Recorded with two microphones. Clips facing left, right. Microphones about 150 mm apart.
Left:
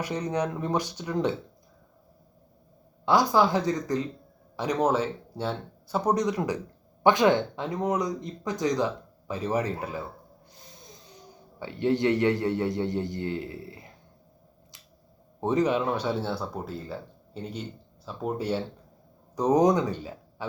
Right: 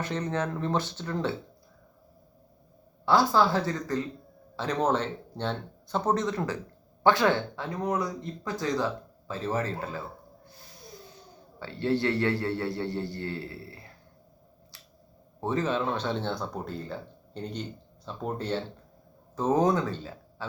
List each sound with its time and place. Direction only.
0.0 s speech: 10° left (ahead or behind)
3.1 s speech: 15° left (ahead or behind)
11.6 s speech: 15° left (ahead or behind)
15.4 s speech: 20° left (ahead or behind)